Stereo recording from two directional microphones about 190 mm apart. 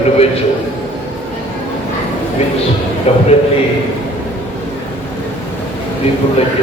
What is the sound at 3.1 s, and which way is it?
Speech, 35° left (ahead or behind).